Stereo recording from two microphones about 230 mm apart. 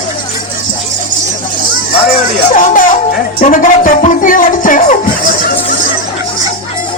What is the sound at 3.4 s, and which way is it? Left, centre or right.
Music, left.